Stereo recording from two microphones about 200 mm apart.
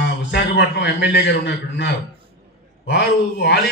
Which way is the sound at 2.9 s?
55° left (ahead or behind).